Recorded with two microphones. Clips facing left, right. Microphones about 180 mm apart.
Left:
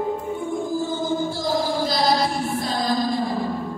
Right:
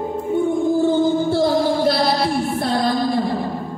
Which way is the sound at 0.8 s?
65° right (ahead or behind).